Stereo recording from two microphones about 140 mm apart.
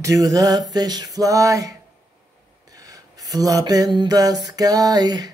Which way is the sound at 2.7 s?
25° right (ahead or behind).